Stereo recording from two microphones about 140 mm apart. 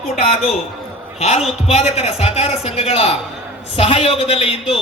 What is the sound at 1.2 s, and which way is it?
A man's voice, 50° left (ahead or behind).